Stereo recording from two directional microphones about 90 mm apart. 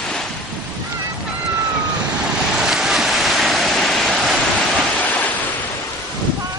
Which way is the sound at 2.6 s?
5° right (ahead or behind).